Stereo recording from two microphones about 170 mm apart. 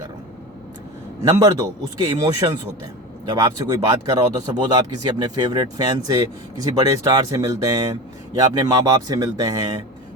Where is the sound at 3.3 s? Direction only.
25° right (ahead or behind).